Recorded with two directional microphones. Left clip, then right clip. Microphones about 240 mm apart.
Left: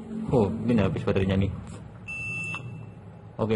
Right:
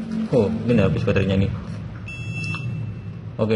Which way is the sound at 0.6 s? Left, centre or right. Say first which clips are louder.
Right 6 dB; centre.